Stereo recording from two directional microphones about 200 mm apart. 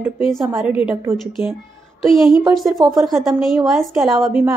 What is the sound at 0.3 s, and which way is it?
A woman's voice, centre (ahead or behind).